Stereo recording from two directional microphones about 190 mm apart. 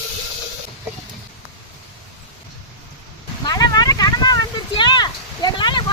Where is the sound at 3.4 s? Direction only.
20° left (ahead or behind).